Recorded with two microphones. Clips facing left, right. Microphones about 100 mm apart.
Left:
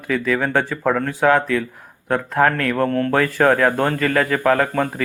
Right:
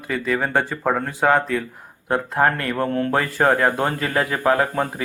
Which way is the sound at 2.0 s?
15° right (ahead or behind).